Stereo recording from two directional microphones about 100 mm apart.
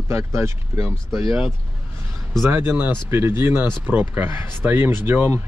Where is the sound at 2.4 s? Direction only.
25° right (ahead or behind).